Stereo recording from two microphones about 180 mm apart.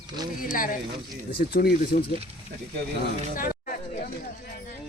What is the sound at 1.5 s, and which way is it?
Speech, 60° left (ahead or behind).